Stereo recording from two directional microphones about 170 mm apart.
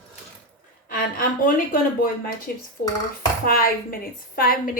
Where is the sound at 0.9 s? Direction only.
55° left (ahead or behind).